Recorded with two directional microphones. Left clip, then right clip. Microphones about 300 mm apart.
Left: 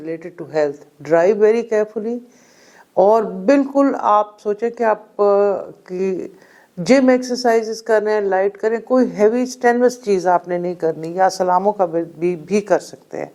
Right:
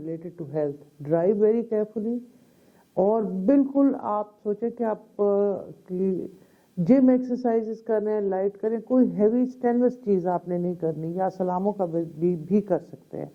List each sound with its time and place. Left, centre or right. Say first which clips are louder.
0.0 s speech: left 7 dB; centre